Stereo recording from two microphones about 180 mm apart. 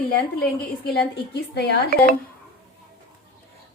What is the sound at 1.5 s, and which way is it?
Speech, 65° left (ahead or behind).